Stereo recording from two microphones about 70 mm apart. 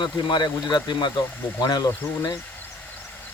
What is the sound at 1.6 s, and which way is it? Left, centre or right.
Speech, left.